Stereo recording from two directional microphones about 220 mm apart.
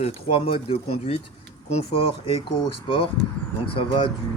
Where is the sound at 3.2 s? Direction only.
50° right (ahead or behind).